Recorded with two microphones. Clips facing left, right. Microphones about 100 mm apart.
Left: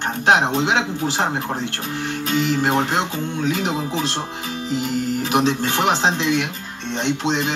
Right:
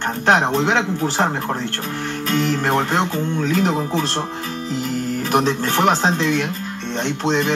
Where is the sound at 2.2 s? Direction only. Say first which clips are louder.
Even; 50° right (ahead or behind).